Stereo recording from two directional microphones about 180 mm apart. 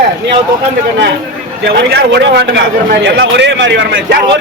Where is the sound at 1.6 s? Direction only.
75° right (ahead or behind).